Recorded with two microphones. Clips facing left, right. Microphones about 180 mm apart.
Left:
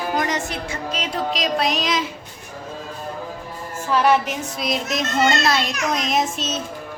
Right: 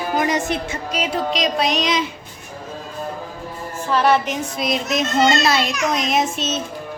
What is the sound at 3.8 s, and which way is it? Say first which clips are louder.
A woman's voice: right 1 dB; 10° left (ahead or behind).